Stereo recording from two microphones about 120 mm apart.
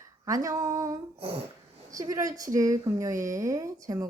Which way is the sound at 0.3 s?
30° right (ahead or behind).